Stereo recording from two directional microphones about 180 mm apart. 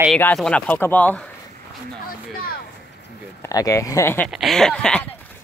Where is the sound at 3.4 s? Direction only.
20° left (ahead or behind).